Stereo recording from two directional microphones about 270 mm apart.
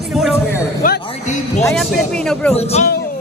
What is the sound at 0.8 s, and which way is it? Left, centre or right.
Speech, left.